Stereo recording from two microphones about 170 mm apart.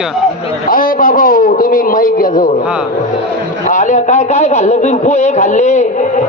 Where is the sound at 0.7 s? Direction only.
55° left (ahead or behind).